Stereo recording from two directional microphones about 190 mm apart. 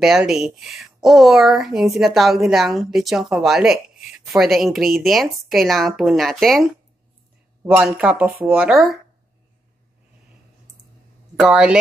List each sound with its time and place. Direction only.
0.0 s speech: centre (ahead or behind)
8.3 s speech: 50° right (ahead or behind)
8.5 s speech: 5° right (ahead or behind)
11.3 s speech: 5° right (ahead or behind)